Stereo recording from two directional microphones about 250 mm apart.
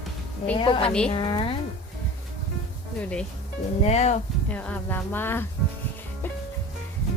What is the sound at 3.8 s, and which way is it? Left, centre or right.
Speech, left.